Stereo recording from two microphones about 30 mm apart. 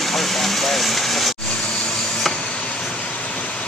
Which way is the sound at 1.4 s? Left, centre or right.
Left.